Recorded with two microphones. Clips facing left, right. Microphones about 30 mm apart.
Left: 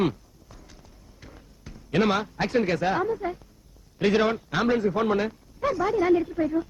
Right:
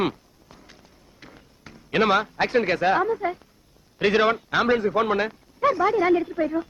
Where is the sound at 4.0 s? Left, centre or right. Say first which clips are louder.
Right 2 dB; right.